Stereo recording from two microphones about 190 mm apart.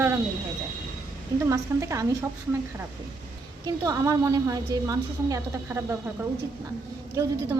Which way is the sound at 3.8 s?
20° right (ahead or behind).